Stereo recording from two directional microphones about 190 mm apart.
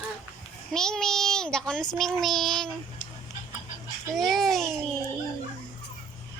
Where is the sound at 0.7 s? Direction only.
5° left (ahead or behind).